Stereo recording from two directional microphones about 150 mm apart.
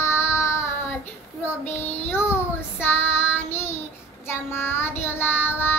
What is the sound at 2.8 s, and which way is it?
Child singing, 15° left (ahead or behind).